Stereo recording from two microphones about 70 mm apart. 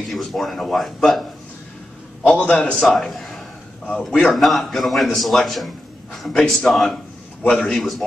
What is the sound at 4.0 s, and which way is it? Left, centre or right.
Speech, centre.